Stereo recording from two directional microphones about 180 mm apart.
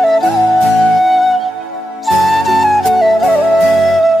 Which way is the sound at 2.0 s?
Centre (ahead or behind).